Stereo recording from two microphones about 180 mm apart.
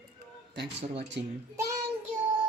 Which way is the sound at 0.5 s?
70° right (ahead or behind).